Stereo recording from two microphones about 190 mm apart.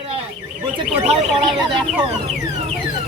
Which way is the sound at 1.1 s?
25° right (ahead or behind).